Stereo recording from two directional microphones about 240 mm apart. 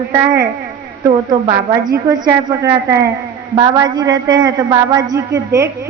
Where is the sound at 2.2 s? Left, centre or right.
Centre.